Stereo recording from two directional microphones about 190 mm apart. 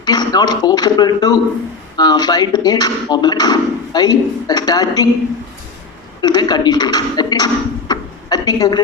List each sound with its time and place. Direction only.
0.0 s a sound: 20° left (ahead or behind)
0.6 s speech: 20° left (ahead or behind)
6.2 s speech: 20° left (ahead or behind)